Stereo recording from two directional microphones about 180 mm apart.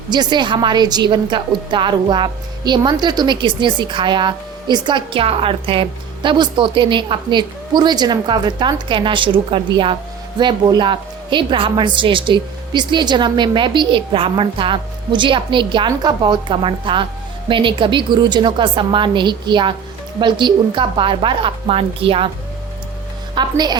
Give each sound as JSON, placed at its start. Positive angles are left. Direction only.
{"t": 0.1, "sound": "a woman's voice", "side_deg": -25}
{"t": 23.3, "sound": "a woman's voice", "side_deg": -25}